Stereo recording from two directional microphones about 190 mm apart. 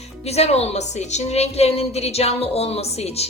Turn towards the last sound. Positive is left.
turn(degrees=35)  # may be behind; listen again after turning